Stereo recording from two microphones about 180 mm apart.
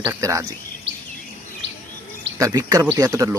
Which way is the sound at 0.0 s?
15° right (ahead or behind).